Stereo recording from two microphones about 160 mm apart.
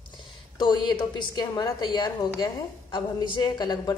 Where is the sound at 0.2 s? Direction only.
25° left (ahead or behind).